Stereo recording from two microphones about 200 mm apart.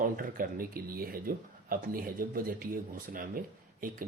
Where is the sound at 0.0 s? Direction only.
45° right (ahead or behind).